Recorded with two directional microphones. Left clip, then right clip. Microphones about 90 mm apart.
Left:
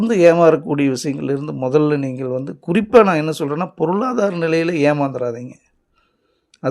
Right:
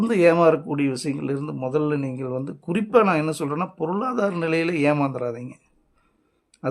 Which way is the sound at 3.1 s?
35° left (ahead or behind).